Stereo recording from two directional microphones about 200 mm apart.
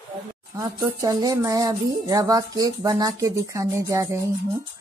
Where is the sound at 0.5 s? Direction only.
15° right (ahead or behind).